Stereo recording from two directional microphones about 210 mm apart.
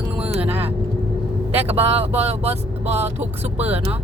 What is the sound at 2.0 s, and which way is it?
Speech, 30° right (ahead or behind).